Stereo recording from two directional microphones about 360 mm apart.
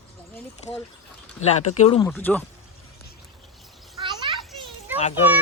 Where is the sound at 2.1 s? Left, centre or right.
Centre.